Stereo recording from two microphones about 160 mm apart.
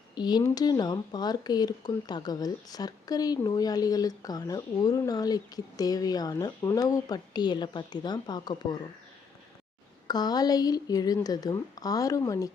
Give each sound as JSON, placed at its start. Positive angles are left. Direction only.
{"t": 0.2, "sound": "speech", "side_deg": 25}
{"t": 10.1, "sound": "speech", "side_deg": 25}